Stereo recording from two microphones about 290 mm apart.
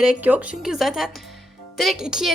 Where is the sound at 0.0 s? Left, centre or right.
Centre.